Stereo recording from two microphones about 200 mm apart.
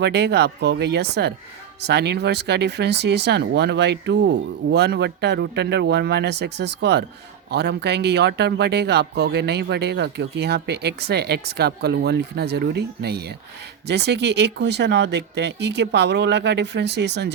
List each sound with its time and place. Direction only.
0.0 s a man's voice: 55° right (ahead or behind)